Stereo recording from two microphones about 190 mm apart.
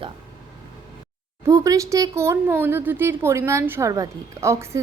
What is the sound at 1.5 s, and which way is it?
Speech, 15° right (ahead or behind).